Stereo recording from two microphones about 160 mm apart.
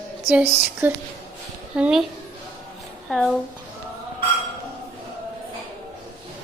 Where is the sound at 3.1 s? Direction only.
5° left (ahead or behind).